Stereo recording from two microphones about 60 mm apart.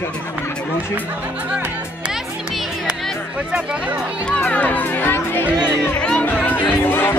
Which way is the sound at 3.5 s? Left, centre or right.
Centre.